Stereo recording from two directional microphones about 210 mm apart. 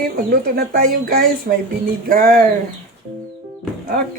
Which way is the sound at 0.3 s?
45° right (ahead or behind).